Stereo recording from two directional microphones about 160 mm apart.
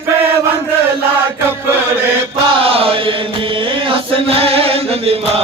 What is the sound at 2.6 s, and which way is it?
Chant, 35° right (ahead or behind).